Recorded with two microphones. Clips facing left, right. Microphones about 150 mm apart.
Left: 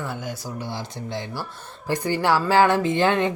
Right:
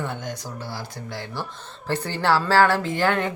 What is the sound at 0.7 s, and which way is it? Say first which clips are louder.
Speech: left 3 dB; 20° left (ahead or behind).